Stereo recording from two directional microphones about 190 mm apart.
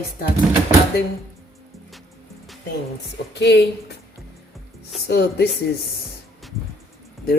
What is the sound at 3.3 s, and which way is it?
Speech, 65° left (ahead or behind).